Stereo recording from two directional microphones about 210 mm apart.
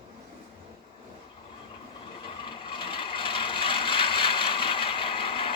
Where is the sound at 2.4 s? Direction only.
25° left (ahead or behind).